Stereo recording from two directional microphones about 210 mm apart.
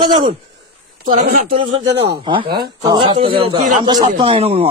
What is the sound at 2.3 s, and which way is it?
Speech, 25° right (ahead or behind).